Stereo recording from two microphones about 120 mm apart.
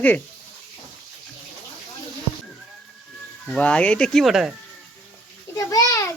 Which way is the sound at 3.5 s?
10° left (ahead or behind).